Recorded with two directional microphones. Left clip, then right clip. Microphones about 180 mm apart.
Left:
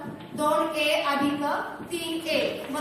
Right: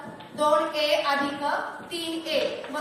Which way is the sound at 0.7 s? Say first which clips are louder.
Right 1 dB; 15° right (ahead or behind).